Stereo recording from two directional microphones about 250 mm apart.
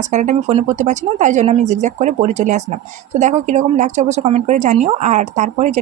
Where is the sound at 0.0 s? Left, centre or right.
Right.